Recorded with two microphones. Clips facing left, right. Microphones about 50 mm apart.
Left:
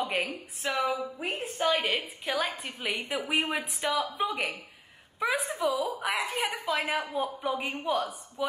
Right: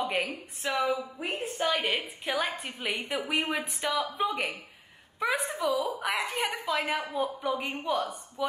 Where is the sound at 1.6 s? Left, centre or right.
Centre.